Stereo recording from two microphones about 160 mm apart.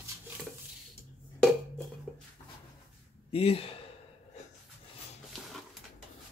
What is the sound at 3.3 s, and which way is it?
Speech, 35° left (ahead or behind).